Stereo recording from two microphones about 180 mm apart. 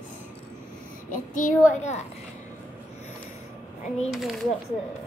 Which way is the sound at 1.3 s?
45° left (ahead or behind).